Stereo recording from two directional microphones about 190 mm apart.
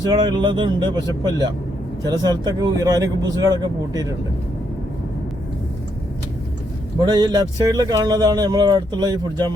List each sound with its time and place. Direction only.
0.0 s speech: 20° right (ahead or behind)
7.0 s speech: 20° right (ahead or behind)